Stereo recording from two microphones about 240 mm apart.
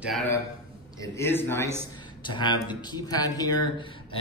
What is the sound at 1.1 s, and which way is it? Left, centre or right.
Speech, centre.